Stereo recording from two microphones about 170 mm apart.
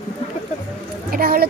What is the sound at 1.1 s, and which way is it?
Speech, 60° right (ahead or behind).